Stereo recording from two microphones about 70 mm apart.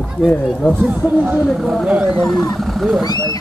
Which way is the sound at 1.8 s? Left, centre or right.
Centre.